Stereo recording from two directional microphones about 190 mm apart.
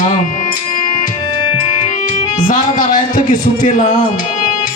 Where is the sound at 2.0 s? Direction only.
45° left (ahead or behind).